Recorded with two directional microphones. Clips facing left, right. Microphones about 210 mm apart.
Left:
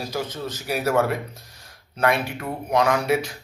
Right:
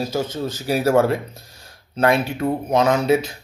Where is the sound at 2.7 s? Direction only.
25° right (ahead or behind).